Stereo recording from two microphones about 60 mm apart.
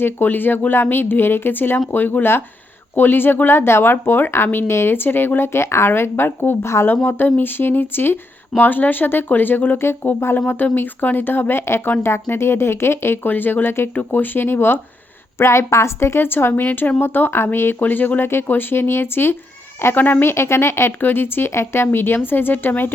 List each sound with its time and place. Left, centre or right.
0.0 s speech: left
15.4 s speech: left
20.3 s speech: left